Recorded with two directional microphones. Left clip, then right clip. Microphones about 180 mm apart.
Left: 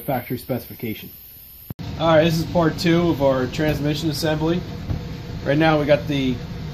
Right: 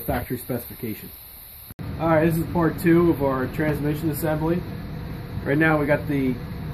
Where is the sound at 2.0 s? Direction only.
30° left (ahead or behind).